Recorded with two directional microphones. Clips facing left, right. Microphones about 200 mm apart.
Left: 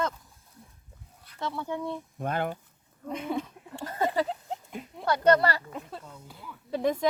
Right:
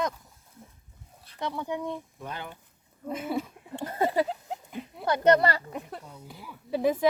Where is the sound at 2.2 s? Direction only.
50° left (ahead or behind).